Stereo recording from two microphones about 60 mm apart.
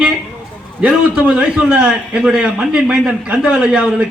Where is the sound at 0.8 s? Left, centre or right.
Centre.